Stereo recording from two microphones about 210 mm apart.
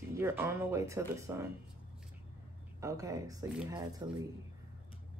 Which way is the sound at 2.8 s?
15° right (ahead or behind).